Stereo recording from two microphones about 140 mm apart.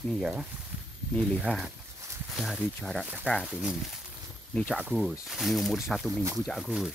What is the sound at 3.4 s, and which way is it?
Speech, 5° right (ahead or behind).